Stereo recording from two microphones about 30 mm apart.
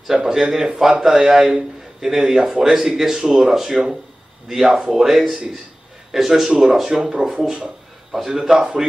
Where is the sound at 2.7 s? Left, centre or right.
Right.